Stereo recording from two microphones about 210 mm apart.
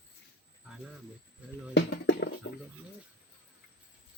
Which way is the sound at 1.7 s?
55° left (ahead or behind).